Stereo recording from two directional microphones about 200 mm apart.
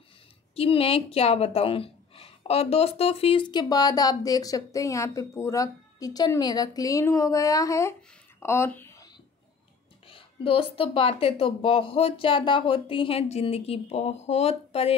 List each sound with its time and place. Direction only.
0.6 s a woman's voice: 30° left (ahead or behind)
8.4 s a sound: 10° left (ahead or behind)
10.0 s a woman's voice: 25° left (ahead or behind)